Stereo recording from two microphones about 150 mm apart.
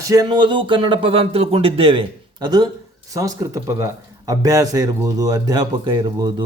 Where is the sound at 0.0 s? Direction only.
25° right (ahead or behind).